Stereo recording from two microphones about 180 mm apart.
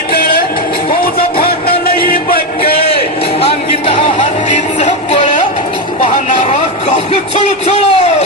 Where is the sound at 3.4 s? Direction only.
30° left (ahead or behind).